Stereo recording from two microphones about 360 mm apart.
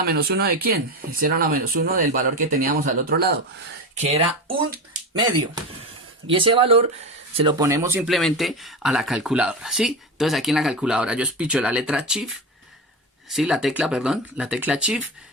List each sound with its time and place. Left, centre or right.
0.1 s speech: right
6.3 s speech: centre
13.3 s speech: centre